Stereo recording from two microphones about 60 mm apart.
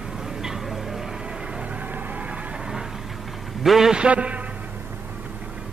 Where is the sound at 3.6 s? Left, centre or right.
Centre.